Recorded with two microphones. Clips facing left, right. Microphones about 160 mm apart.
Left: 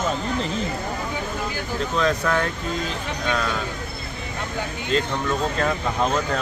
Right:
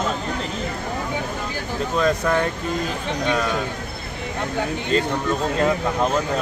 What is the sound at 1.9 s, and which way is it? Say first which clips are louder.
Speech: right 2 dB; 10° right (ahead or behind).